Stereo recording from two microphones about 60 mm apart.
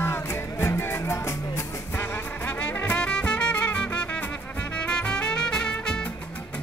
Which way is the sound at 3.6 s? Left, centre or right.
Left.